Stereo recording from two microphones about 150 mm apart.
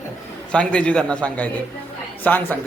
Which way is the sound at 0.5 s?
5° left (ahead or behind).